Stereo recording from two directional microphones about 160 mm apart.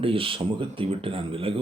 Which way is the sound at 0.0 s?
35° right (ahead or behind).